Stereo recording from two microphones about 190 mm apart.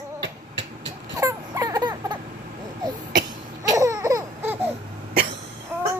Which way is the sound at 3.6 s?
15° right (ahead or behind).